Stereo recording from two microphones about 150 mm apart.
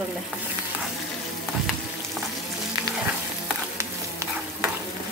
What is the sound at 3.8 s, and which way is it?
Stir, 15° right (ahead or behind).